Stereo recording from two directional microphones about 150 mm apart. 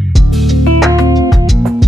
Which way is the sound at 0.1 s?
Centre (ahead or behind).